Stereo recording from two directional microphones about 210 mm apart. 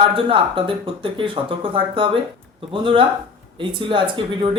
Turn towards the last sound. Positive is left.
turn(degrees=-25)  # may be behind; listen again after turning